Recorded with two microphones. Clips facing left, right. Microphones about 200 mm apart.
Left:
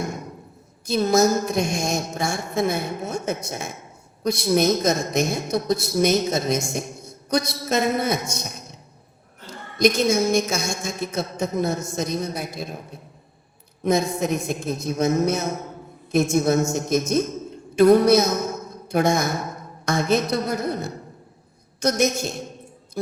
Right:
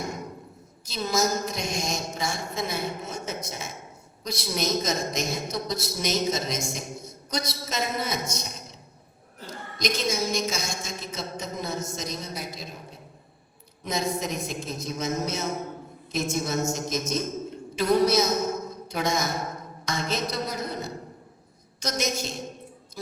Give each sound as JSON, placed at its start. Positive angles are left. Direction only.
{"t": 0.9, "sound": "a woman's voice", "side_deg": 55}
{"t": 9.7, "sound": "a man's voice", "side_deg": 55}
{"t": 13.8, "sound": "a man's voice", "side_deg": 55}